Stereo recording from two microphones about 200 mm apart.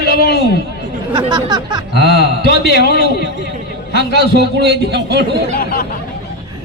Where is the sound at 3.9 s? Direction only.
60° right (ahead or behind).